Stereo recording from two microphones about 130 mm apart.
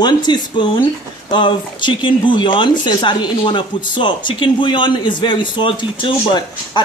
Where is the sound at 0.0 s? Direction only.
35° left (ahead or behind).